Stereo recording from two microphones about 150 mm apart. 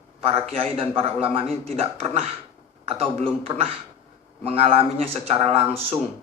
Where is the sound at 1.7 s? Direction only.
40° right (ahead or behind).